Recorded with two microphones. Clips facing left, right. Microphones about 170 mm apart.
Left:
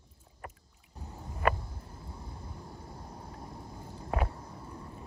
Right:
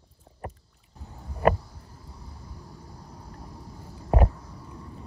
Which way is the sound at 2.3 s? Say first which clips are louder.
Even; 25° left (ahead or behind).